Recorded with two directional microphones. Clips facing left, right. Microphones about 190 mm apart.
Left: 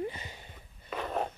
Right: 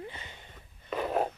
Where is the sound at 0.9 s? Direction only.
5° right (ahead or behind).